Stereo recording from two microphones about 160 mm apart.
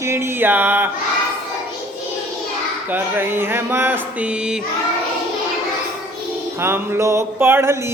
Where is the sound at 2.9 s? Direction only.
15° right (ahead or behind).